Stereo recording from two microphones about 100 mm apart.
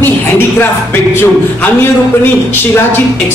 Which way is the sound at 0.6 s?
20° left (ahead or behind).